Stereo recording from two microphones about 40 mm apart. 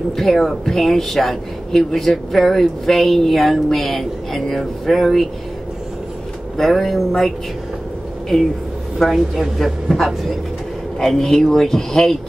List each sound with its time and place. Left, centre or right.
0.1 s speech: centre
6.5 s speech: centre
8.9 s a woman's voice: centre